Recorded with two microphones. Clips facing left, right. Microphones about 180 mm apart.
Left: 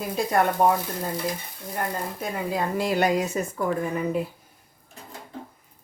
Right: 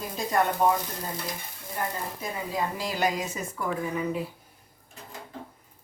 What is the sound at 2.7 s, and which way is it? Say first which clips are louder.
Speech: left 9 dB; 60° left (ahead or behind).